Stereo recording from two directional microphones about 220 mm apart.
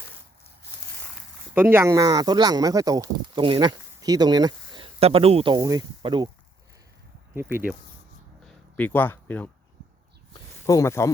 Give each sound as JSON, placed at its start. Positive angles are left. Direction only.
{"t": 1.5, "sound": "speech", "side_deg": -10}
{"t": 7.3, "sound": "speech", "side_deg": -10}
{"t": 8.4, "sound": "speech", "side_deg": 5}
{"t": 10.7, "sound": "speech", "side_deg": 15}